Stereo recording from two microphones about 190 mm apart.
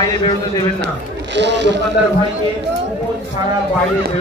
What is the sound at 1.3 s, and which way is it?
Speech, 65° right (ahead or behind).